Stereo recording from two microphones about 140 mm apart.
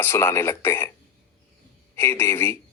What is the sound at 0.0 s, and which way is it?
Speech, 20° left (ahead or behind).